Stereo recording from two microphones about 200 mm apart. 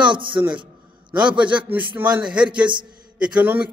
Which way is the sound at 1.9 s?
10° right (ahead or behind).